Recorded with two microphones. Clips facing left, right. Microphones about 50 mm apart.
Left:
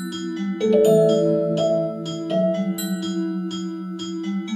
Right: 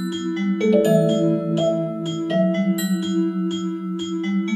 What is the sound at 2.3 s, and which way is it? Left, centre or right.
Music, right.